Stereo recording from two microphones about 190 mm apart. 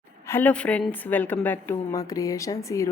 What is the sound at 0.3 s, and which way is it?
A woman's voice, 10° left (ahead or behind).